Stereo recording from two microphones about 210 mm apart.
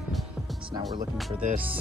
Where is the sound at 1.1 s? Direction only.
Centre (ahead or behind).